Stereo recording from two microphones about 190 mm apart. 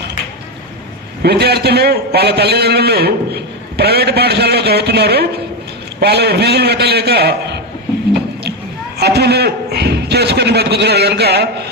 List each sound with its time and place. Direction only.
1.2 s a man's voice: 60° right (ahead or behind)
9.0 s a man's voice: 60° right (ahead or behind)